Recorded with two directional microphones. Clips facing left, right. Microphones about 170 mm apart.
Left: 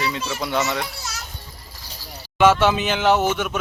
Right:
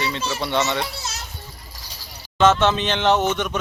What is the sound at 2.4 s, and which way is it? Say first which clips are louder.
Speech: left 1 dB; 10° left (ahead or behind).